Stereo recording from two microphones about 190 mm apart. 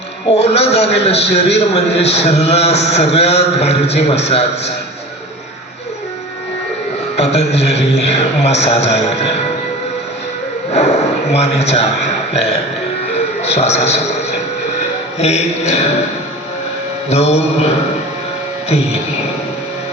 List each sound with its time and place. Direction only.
0.3 s a man's voice: 35° left (ahead or behind)
7.2 s a man's voice: 35° left (ahead or behind)
10.7 s a man's voice: 35° left (ahead or behind)
13.1 s music: 35° left (ahead or behind)
15.2 s a man's voice: 35° left (ahead or behind)
17.1 s a man's voice: 35° left (ahead or behind)